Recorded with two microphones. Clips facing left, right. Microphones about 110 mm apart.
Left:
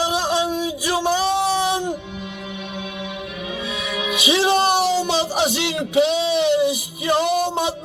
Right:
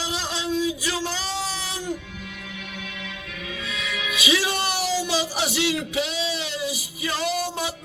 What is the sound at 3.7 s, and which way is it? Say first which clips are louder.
Music: left 5 dB; 20° left (ahead or behind).